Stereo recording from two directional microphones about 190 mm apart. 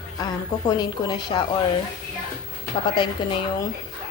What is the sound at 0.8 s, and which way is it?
Speech, 20° left (ahead or behind).